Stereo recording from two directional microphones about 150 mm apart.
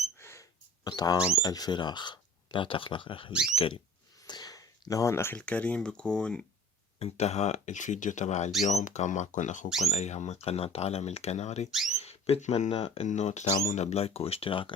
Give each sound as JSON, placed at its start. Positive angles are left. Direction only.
{"t": 0.2, "sound": "a sound", "side_deg": 20}
{"t": 0.9, "sound": "speech", "side_deg": 25}
{"t": 7.0, "sound": "speech", "side_deg": 45}